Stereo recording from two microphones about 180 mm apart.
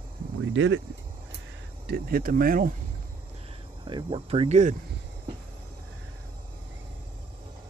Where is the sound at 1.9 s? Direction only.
55° right (ahead or behind).